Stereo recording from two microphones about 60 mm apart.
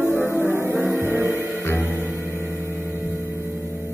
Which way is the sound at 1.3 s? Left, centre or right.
Left.